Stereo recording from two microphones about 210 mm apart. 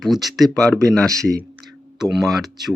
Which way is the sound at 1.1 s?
15° right (ahead or behind).